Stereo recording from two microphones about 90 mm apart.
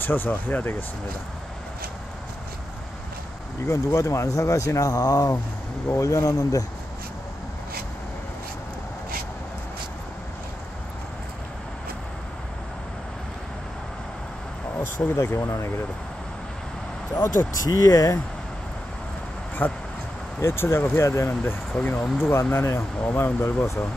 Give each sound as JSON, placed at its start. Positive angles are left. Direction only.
{"t": 0.0, "sound": "speech", "side_deg": 20}
{"t": 3.6, "sound": "speech", "side_deg": 35}
{"t": 15.0, "sound": "speech", "side_deg": 30}
{"t": 17.6, "sound": "speech", "side_deg": 40}
{"t": 19.6, "sound": "speech", "side_deg": 20}
{"t": 21.3, "sound": "speech", "side_deg": 20}
{"t": 22.2, "sound": "speech", "side_deg": 25}